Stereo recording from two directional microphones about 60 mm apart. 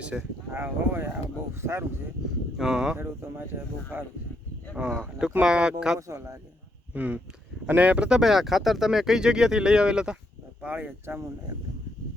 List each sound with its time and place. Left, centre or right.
0.1 s speech: centre
0.5 s speech: right
2.6 s speech: centre
2.9 s speech: right
4.8 s speech: right
6.0 s speech: right
6.9 s speech: right
8.2 s speech: centre
10.6 s speech: right